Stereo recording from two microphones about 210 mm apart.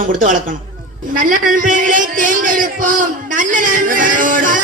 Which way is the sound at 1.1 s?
40° right (ahead or behind).